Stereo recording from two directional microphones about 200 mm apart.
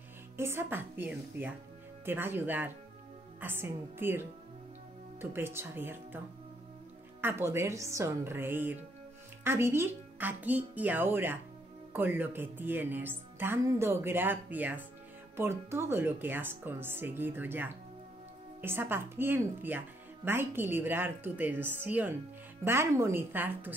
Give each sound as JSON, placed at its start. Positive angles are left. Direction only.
{"t": 0.4, "sound": "speech", "side_deg": -10}